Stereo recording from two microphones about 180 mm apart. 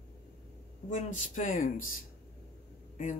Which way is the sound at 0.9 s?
45° left (ahead or behind).